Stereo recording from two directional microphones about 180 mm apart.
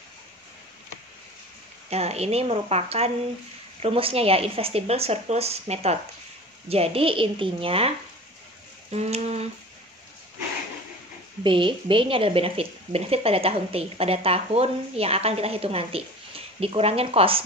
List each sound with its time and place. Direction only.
1.9 s speech: 35° right (ahead or behind)
8.9 s speech: 35° right (ahead or behind)
11.4 s speech: 30° right (ahead or behind)